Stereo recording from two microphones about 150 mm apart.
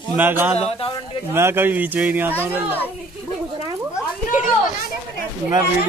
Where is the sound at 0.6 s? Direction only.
40° left (ahead or behind).